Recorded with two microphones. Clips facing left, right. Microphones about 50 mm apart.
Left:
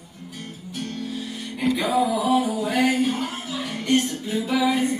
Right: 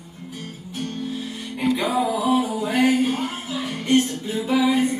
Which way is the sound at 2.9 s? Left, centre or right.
Right.